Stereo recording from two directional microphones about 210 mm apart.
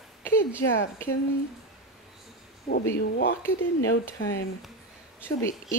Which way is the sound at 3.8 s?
65° left (ahead or behind).